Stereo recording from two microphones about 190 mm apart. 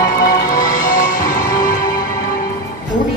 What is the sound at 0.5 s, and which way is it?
Music, 45° left (ahead or behind).